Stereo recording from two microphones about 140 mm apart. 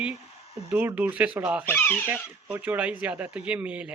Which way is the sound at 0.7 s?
15° right (ahead or behind).